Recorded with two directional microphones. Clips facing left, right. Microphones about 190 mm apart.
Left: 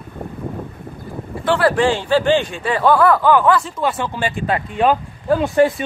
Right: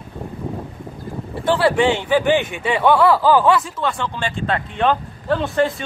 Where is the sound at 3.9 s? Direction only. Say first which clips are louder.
Left 2 dB; 15° left (ahead or behind).